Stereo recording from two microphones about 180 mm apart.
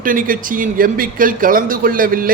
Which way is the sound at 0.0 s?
50° right (ahead or behind).